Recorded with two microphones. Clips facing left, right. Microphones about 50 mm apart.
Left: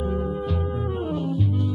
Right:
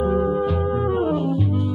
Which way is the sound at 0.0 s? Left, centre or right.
Centre.